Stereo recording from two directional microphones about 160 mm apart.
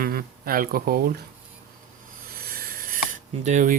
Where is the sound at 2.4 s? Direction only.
65° right (ahead or behind); by 3.8 s 50° right (ahead or behind).